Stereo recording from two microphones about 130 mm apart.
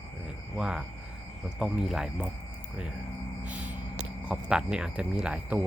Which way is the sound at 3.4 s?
10° right (ahead or behind).